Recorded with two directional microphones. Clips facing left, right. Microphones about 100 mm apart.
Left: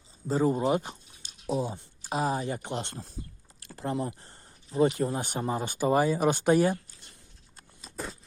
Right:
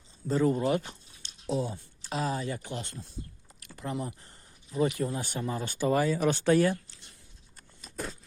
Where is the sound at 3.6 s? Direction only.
35° left (ahead or behind).